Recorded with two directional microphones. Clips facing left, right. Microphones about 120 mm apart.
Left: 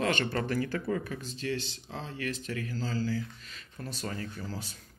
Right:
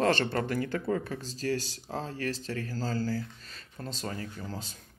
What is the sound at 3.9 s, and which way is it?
Speech, 20° right (ahead or behind).